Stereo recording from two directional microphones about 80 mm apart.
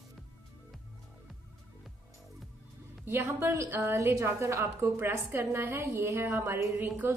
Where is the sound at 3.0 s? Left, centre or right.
Right.